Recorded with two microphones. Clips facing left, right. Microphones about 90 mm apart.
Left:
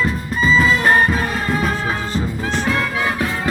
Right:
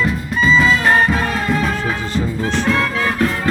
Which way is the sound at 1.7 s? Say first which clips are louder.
Right 1 dB; 15° left (ahead or behind).